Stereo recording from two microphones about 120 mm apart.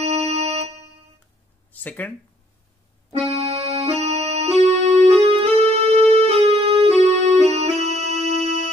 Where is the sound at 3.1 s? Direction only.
55° right (ahead or behind).